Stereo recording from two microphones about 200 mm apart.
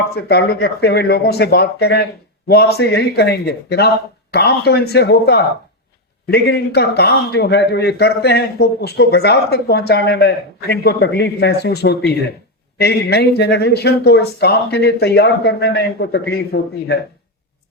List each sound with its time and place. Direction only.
0.0 s a man's voice: 55° left (ahead or behind)